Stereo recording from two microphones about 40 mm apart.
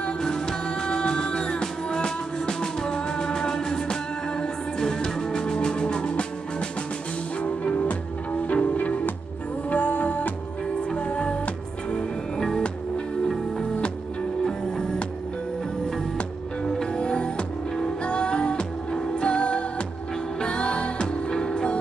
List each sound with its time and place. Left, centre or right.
0.2 s music: centre
7.4 s music: left
11.0 s music: left
12.4 s music: centre
16.6 s music: centre